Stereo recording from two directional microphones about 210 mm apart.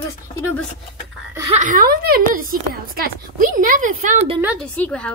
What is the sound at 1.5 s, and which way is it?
A woman's voice, 35° right (ahead or behind).